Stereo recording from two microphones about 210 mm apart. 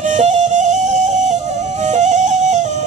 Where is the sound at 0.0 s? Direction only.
35° right (ahead or behind).